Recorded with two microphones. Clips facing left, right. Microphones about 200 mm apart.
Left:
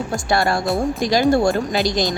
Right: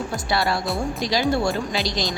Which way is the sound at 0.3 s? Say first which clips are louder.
Left 5 dB; 50° left (ahead or behind).